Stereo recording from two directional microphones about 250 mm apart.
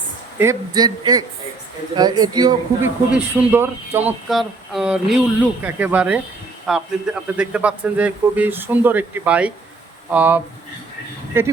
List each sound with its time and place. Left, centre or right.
0.3 s a man's voice: centre